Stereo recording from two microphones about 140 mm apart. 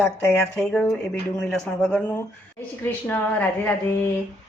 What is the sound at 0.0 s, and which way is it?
Speech, centre (ahead or behind).